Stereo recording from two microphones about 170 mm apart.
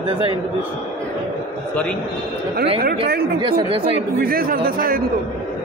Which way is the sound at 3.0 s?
65° right (ahead or behind).